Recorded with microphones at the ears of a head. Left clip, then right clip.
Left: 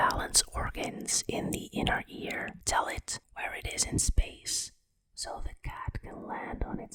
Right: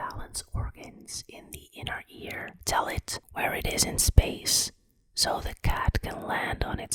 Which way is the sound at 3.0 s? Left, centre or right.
Right.